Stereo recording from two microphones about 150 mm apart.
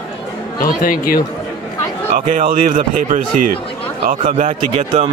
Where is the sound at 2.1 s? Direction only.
65° right (ahead or behind).